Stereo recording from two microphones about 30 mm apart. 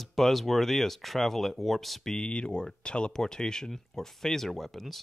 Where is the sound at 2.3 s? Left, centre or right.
Left.